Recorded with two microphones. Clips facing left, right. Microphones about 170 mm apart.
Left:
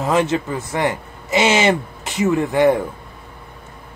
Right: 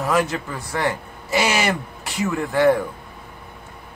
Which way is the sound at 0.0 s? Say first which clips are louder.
Left 3 dB; 25° left (ahead or behind).